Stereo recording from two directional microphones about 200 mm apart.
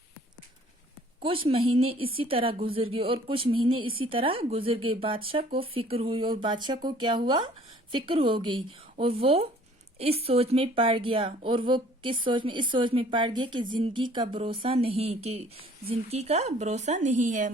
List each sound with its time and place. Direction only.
1.2 s a woman's voice: 25° right (ahead or behind)